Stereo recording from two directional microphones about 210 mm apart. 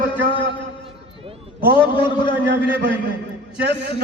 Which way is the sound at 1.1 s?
25° right (ahead or behind).